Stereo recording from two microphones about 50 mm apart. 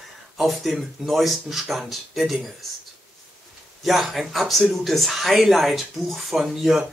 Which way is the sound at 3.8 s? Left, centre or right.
Centre.